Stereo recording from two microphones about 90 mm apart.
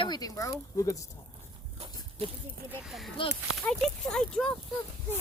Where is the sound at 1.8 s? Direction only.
90° right.